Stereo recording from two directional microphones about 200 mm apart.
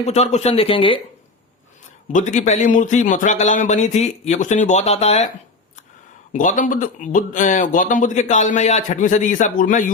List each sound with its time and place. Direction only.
0.0 s speech: 35° left (ahead or behind)
2.1 s speech: 40° left (ahead or behind)
6.3 s speech: 40° left (ahead or behind)